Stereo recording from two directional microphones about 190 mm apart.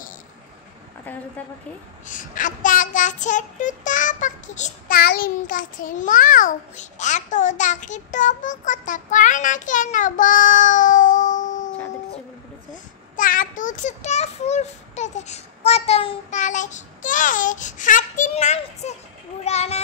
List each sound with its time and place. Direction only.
2.0 s child singing: 45° left (ahead or behind)
12.7 s a child's voice: 45° left (ahead or behind)